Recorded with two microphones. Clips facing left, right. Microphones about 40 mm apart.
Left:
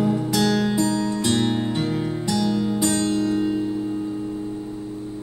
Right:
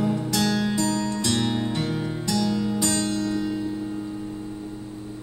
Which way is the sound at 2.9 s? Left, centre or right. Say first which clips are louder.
Left 4 dB; left.